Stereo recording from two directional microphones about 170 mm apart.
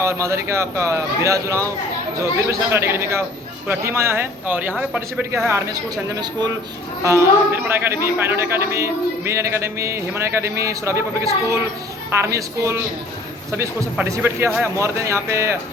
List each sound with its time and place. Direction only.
0.0 s a man's voice: 15° right (ahead or behind)
13.9 s a man's voice: 10° right (ahead or behind)